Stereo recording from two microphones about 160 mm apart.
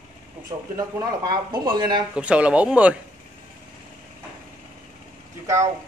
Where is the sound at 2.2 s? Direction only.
5° right (ahead or behind).